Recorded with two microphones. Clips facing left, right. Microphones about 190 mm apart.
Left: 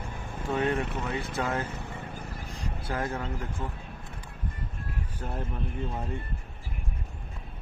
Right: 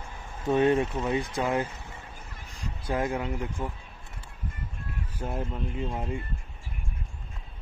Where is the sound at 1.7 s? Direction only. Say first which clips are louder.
Left 6 dB; 60° left (ahead or behind).